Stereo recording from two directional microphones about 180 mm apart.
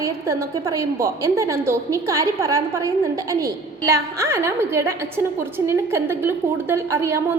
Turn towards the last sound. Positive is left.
turn(degrees=-15)  # may be behind; listen again after turning